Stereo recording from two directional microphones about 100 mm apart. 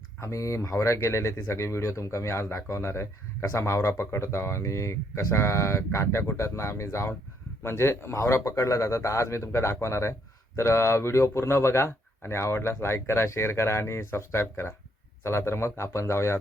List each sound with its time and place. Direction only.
0.2 s speech: 30° left (ahead or behind)